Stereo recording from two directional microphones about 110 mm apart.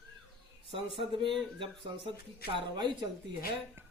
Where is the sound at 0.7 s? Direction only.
50° right (ahead or behind).